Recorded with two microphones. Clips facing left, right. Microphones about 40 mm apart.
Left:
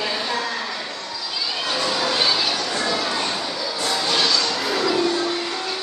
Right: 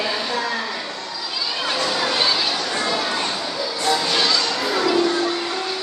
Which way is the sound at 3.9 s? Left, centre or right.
Centre.